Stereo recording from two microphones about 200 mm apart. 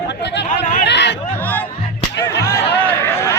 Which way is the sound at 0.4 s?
45° left (ahead or behind).